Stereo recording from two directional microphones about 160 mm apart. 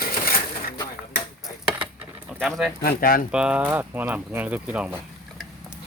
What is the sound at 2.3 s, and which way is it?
Speech, centre (ahead or behind).